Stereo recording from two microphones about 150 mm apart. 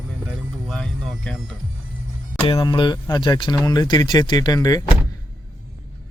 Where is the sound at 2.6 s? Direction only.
30° left (ahead or behind).